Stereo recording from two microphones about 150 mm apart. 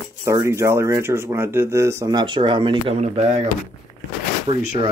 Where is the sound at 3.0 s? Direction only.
45° right (ahead or behind).